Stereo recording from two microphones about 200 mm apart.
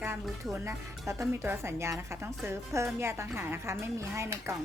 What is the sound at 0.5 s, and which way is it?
A woman's voice, 15° right (ahead or behind).